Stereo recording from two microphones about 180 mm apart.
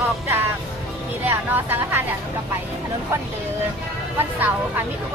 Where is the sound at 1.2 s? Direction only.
10° right (ahead or behind).